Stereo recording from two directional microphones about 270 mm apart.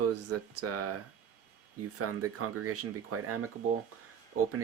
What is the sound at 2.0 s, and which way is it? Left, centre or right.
Speech, right.